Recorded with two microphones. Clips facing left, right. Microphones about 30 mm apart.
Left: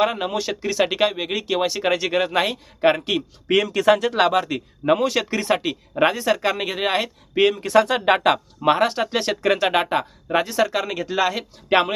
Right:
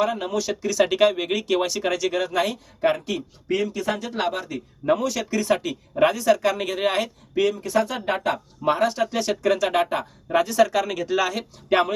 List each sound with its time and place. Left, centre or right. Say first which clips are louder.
0.0 s speech: left 2 dB; left
3.5 s speech: left 7 dB; left
4.9 s speech: left 3 dB; left
7.3 s speech: left 5 dB; left
8.7 s speech: left 2 dB; left; by 11.4 s centre
11.7 s speech: left 2 dB; left